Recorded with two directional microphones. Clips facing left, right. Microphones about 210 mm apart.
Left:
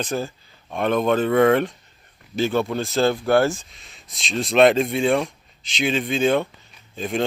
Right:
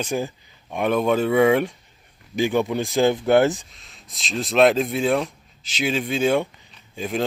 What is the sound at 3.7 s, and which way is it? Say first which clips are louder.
Speech: left 1 dB; centre (ahead or behind).